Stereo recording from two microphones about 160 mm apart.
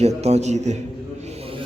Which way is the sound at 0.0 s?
40° right (ahead or behind).